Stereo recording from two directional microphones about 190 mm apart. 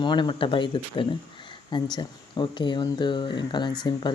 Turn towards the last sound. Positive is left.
turn(degrees=25)  # may be behind; listen again after turning